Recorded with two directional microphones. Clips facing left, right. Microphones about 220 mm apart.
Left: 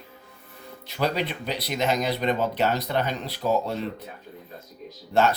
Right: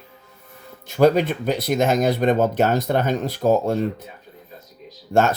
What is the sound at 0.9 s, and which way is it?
Speech, 45° right (ahead or behind).